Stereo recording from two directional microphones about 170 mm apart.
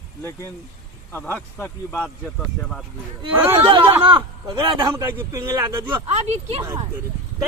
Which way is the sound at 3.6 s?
30° right (ahead or behind).